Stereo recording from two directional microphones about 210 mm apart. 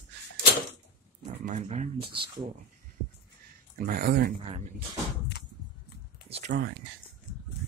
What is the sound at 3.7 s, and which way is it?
Speech, 45° right (ahead or behind).